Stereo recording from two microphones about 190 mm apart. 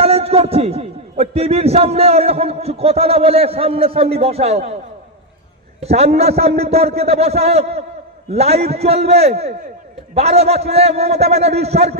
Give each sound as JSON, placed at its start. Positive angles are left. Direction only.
{"t": 0.0, "sound": "a man's voice", "side_deg": -30}
{"t": 5.8, "sound": "a man's voice", "side_deg": -35}